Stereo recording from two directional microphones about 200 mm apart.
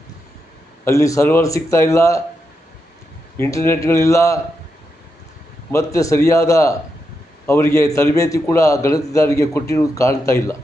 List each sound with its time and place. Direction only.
0.9 s a man's voice: 15° left (ahead or behind)
3.3 s a man's voice: 15° left (ahead or behind)
5.7 s a man's voice: 15° left (ahead or behind)